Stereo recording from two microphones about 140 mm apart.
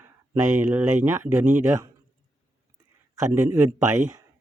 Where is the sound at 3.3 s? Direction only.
20° right (ahead or behind).